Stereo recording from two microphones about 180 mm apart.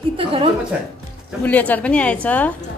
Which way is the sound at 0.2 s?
30° right (ahead or behind).